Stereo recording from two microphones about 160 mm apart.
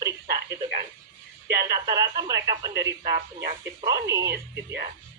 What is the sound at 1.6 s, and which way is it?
Speech, 20° right (ahead or behind).